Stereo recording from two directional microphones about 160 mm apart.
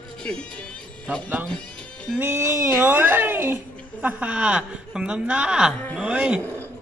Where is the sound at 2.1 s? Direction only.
15° right (ahead or behind).